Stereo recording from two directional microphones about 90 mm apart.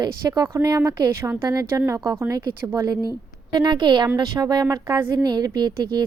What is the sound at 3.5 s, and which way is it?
A woman's voice, 55° right (ahead or behind).